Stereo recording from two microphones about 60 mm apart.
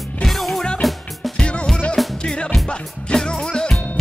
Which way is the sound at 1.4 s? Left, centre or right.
Centre.